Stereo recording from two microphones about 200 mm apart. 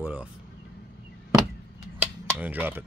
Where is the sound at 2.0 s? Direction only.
10° right (ahead or behind).